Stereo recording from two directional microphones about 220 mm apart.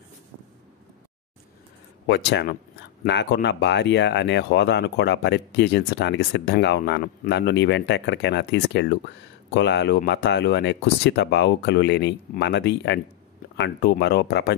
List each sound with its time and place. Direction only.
2.0 s speech: 50° left (ahead or behind)